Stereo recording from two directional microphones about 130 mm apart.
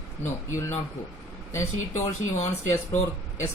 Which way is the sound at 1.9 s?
55° left (ahead or behind).